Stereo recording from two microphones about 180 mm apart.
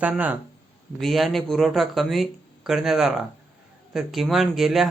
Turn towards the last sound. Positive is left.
turn(degrees=0)  # may be behind; listen again after turning